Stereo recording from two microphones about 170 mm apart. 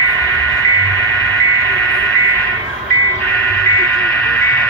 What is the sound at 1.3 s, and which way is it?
Vehicle, 15° left (ahead or behind).